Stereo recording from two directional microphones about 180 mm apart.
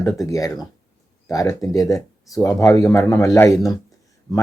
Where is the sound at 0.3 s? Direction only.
20° left (ahead or behind).